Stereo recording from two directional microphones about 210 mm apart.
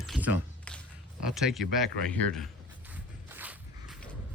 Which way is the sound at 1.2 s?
Centre (ahead or behind).